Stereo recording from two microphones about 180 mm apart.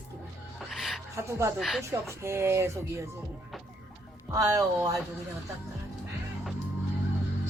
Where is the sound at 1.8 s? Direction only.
15° right (ahead or behind).